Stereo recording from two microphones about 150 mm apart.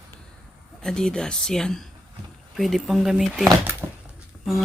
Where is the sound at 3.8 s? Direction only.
15° right (ahead or behind).